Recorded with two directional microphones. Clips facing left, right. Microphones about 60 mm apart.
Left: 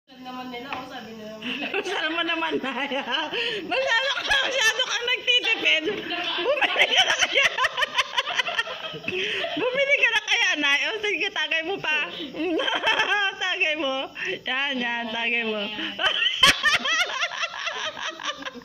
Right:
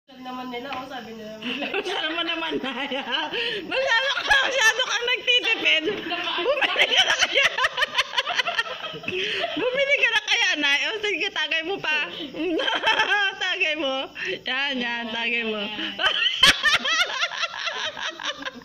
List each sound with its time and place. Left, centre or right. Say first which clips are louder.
1.7 s speech: left 1 dB; centre
2.0 s speech: left 2 dB; left; by 4.0 s centre
4.3 s speech: right 4 dB; centre
6.5 s a sound: left 1 dB; centre
9.3 s speech: right 1 dB; centre
9.7 s a woman's voice: even; left
16.4 s a sound: right 1 dB; centre